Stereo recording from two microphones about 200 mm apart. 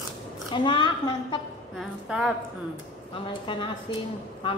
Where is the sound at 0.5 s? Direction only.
25° left (ahead or behind).